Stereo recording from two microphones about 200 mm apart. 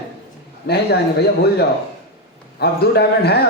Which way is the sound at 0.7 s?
55° left (ahead or behind).